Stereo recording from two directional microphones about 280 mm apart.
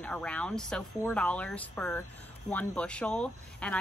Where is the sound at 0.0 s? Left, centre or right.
Centre.